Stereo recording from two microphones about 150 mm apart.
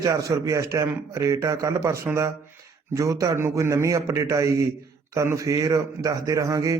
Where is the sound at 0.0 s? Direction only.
20° right (ahead or behind).